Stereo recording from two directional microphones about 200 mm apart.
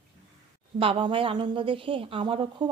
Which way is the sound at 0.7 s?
25° right (ahead or behind).